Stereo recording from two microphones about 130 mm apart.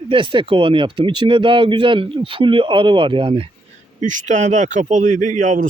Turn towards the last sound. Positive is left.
turn(degrees=-80)